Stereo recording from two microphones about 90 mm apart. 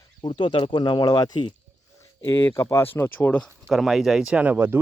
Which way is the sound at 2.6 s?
35° left (ahead or behind).